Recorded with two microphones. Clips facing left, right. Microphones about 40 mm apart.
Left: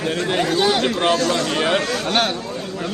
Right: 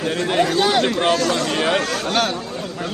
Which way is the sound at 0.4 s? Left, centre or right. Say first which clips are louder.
Left 2 dB; right.